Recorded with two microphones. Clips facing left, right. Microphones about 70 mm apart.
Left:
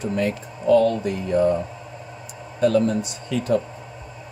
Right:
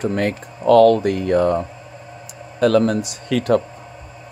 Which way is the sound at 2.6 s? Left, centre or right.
Right.